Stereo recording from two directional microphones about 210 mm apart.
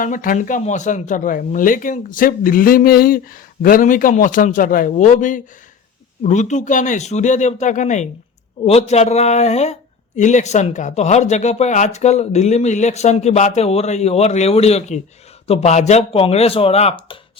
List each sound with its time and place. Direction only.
0.0 s speech: 40° left (ahead or behind)